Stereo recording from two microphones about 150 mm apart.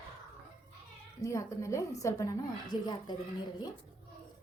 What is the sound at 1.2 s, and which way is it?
A woman's voice, 20° left (ahead or behind).